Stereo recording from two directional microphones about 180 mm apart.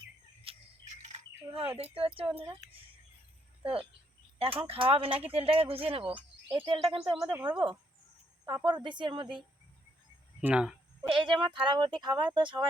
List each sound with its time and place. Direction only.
0.4 s bird: 40° right (ahead or behind)
1.8 s speech: 30° right (ahead or behind)
3.6 s speech: 30° right (ahead or behind)
10.4 s speech: 5° right (ahead or behind)
11.2 s speech: 25° right (ahead or behind)